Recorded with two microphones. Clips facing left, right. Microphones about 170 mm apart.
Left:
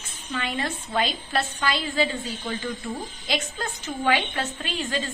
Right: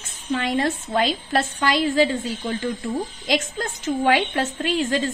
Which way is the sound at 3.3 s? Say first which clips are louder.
Right 5 dB; 45° right (ahead or behind).